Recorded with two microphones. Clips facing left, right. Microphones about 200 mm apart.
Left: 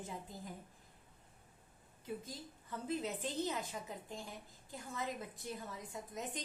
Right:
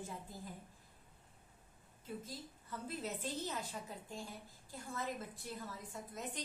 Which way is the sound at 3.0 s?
15° left (ahead or behind).